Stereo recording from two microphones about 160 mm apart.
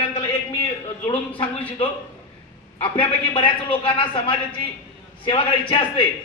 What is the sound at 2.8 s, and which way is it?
A man's voice, 30° left (ahead or behind).